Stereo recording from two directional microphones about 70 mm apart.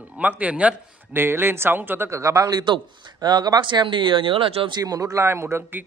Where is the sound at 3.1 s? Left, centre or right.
Right.